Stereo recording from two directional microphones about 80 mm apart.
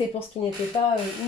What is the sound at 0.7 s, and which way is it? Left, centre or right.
Speech, left.